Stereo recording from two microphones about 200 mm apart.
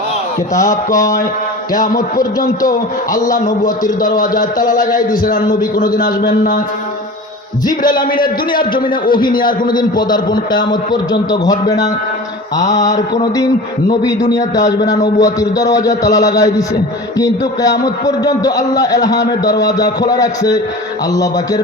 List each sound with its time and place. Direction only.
0.5 s a man's voice: 15° left (ahead or behind)
2.6 s a man's voice: 15° left (ahead or behind)
3.2 s a man's voice: 40° left (ahead or behind)
5.5 s a man's voice: 20° left (ahead or behind)
6.0 s a man's voice: 45° left (ahead or behind)
7.6 s a man's voice: 20° left (ahead or behind)
8.8 s a man's voice: 45° left (ahead or behind)
9.1 s a man's voice: 20° left (ahead or behind)
13.9 s a man's voice: 20° left (ahead or behind)